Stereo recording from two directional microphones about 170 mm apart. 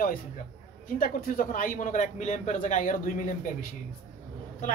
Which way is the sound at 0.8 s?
55° left (ahead or behind).